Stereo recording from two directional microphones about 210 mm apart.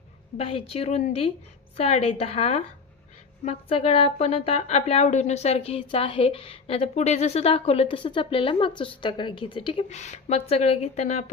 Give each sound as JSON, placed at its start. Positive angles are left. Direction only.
{"t": 0.4, "sound": "speech", "side_deg": 25}